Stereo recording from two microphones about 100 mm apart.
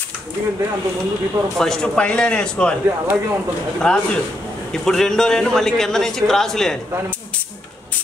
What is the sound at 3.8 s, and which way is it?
A man's voice, 5° left (ahead or behind).